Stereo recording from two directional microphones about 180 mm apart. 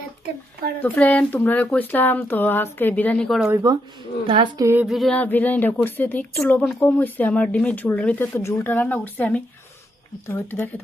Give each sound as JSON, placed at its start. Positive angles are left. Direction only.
{"t": 0.8, "sound": "a woman's voice", "side_deg": 10}
{"t": 3.5, "sound": "speech", "side_deg": -20}
{"t": 4.9, "sound": "a woman's voice", "side_deg": 0}